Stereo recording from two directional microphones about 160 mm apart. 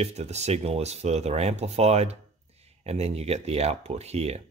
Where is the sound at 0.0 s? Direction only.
45° right (ahead or behind).